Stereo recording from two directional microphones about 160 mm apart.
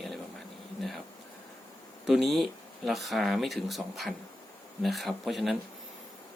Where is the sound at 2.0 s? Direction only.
Centre (ahead or behind).